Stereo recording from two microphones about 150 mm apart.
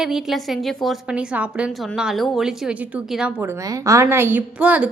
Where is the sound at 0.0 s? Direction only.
Centre (ahead or behind).